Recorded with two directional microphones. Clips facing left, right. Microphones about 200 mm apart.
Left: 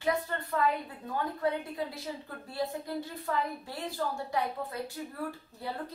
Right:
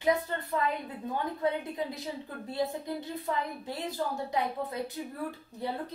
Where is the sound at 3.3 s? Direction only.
20° right (ahead or behind).